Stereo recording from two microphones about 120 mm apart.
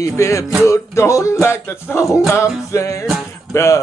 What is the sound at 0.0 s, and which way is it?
Music, 25° left (ahead or behind).